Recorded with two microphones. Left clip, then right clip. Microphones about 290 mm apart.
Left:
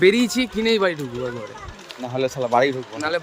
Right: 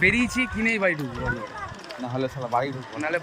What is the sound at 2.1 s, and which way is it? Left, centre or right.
Speech, left.